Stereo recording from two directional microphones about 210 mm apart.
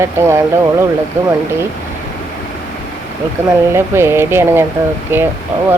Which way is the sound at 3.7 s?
10° right (ahead or behind).